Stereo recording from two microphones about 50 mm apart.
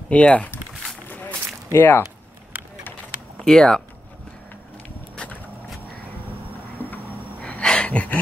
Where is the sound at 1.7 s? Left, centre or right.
Left.